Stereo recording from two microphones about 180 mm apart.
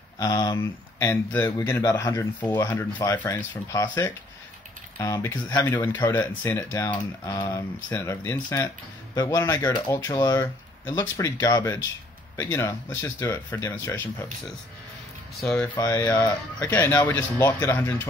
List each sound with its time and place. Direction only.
0.2 s speech: 20° left (ahead or behind)
15.4 s speech: 5° left (ahead or behind)
15.7 s speech: 20° left (ahead or behind)